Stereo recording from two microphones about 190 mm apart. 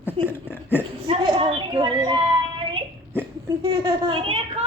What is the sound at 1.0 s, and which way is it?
Speech, 30° right (ahead or behind).